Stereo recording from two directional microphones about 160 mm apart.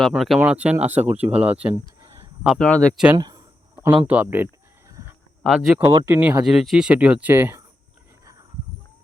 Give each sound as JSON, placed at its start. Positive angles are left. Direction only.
{"t": 0.0, "sound": "speech", "side_deg": 0}
{"t": 2.6, "sound": "speech", "side_deg": 5}
{"t": 3.2, "sound": "a sound", "side_deg": -25}
{"t": 4.0, "sound": "speech", "side_deg": -10}
{"t": 5.5, "sound": "speech", "side_deg": -5}